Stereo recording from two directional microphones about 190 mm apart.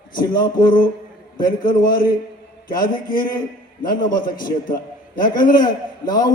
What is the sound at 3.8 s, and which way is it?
A man's voice, 25° left (ahead or behind).